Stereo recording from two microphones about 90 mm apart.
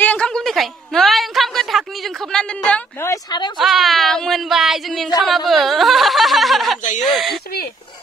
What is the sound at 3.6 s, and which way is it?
Speech, centre (ahead or behind).